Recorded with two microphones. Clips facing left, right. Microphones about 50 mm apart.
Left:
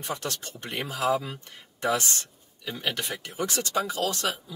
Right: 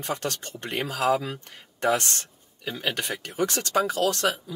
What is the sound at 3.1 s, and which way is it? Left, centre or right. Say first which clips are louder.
Speech: right 4 dB; right.